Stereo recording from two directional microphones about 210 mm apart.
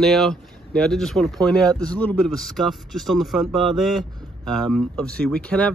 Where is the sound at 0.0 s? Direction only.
Centre (ahead or behind).